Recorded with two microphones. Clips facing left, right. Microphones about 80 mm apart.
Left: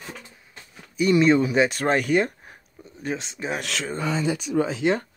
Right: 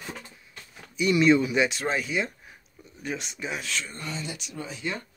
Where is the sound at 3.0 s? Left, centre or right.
Left.